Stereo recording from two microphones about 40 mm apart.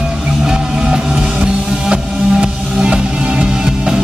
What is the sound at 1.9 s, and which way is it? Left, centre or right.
Music, right.